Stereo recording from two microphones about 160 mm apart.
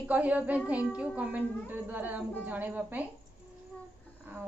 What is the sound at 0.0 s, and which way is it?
A woman's voice, 10° right (ahead or behind).